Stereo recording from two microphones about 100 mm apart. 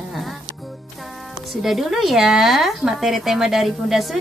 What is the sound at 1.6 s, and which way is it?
A woman's voice, 5° right (ahead or behind).